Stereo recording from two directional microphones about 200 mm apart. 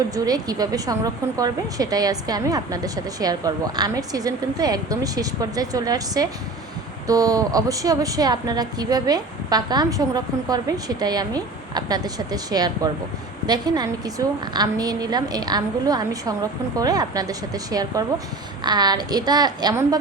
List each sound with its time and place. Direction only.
0.1 s a woman's voice: 20° right (ahead or behind)